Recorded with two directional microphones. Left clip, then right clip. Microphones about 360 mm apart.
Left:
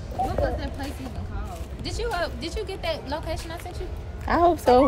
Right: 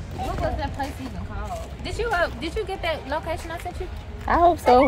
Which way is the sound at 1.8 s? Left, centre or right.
Centre.